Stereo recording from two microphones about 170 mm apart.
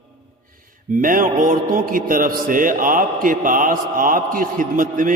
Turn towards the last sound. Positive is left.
turn(degrees=-50)  # may be behind; listen again after turning